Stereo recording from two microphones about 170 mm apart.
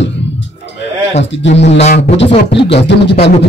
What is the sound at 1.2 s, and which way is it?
Speech, 90° left.